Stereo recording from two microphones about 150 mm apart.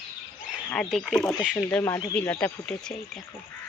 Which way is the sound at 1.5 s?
15° left (ahead or behind).